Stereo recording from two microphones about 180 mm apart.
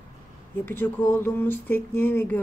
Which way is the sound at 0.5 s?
10° left (ahead or behind).